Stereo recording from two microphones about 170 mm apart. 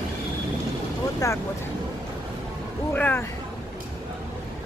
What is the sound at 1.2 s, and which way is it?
Speech, 20° left (ahead or behind).